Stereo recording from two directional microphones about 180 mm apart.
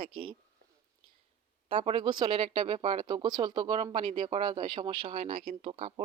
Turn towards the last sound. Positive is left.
turn(degrees=-35)  # may be behind; listen again after turning